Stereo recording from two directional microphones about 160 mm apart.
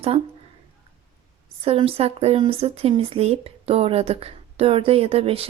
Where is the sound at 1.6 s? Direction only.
35° right (ahead or behind).